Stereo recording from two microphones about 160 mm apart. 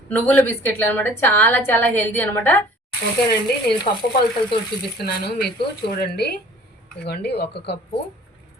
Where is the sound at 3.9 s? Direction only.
50° left (ahead or behind).